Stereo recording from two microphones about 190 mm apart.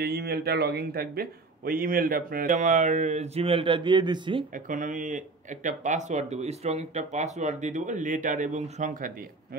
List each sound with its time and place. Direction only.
0.0 s speech: 55° right (ahead or behind); by 4.5 s 25° right (ahead or behind)
4.6 s speech: 40° right (ahead or behind)